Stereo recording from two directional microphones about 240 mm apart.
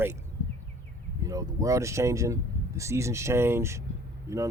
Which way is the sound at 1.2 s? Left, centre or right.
Centre.